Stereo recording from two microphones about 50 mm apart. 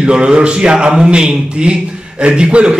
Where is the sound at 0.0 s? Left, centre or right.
Centre.